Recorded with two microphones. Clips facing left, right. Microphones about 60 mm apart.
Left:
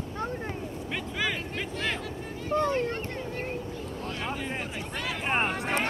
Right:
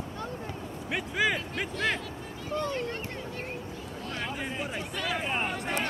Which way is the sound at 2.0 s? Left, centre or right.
Left.